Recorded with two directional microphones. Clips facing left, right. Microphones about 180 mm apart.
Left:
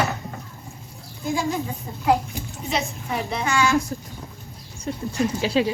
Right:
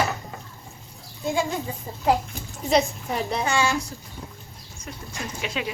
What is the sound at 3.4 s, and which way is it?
Speech, 30° right (ahead or behind).